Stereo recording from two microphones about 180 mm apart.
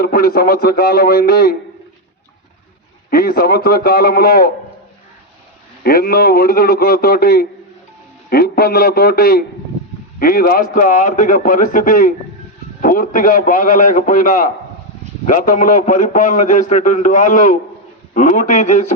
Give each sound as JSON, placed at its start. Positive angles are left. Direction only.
{"t": 0.0, "sound": "a man's voice", "side_deg": 55}
{"t": 3.1, "sound": "a man's voice", "side_deg": 55}
{"t": 5.8, "sound": "a man's voice", "side_deg": 55}